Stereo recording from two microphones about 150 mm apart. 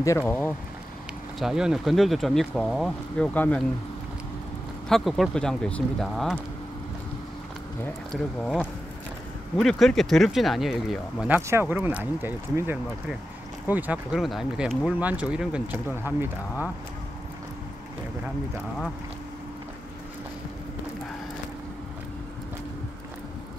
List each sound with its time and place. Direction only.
0.0 s speech: 20° left (ahead or behind)
1.4 s speech: 5° right (ahead or behind)
3.3 s speech: 10° left (ahead or behind)
4.8 s speech: centre (ahead or behind)
8.1 s speech: 5° left (ahead or behind); by 16.6 s 15° right (ahead or behind)